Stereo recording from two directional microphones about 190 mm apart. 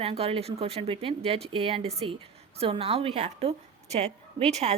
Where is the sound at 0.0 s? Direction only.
30° right (ahead or behind).